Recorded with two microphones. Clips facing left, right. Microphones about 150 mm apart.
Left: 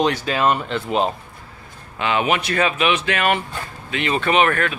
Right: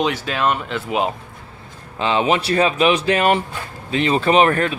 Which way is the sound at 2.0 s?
30° right (ahead or behind).